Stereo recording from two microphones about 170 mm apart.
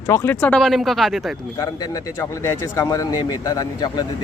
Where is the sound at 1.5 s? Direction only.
20° left (ahead or behind).